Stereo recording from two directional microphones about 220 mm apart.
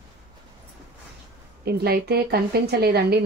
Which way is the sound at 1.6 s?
45° right (ahead or behind).